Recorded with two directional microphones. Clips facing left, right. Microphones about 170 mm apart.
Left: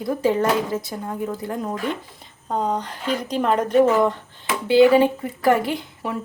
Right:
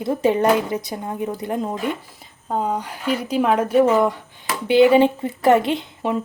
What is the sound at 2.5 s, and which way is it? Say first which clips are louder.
A woman's voice: even; 5° right (ahead or behind).